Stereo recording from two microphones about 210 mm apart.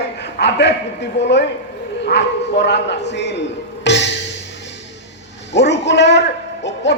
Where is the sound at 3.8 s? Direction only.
55° left (ahead or behind).